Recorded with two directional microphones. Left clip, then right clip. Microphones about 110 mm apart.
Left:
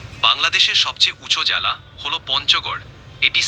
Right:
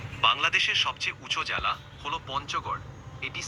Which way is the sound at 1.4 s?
10° left (ahead or behind).